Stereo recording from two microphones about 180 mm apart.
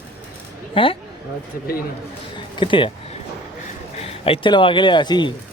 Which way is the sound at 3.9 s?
35° left (ahead or behind).